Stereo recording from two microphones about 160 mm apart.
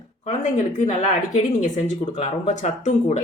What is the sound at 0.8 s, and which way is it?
A woman's voice, 45° left (ahead or behind).